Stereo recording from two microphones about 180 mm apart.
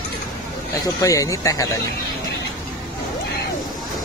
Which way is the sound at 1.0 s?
20° left (ahead or behind).